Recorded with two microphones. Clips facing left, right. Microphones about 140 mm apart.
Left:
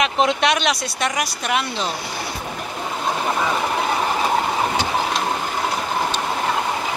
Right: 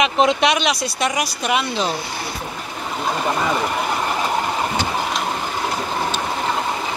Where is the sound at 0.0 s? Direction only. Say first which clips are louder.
Right 2 dB; centre (ahead or behind).